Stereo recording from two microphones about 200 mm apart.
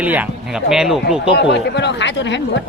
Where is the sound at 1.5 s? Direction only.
60° left (ahead or behind).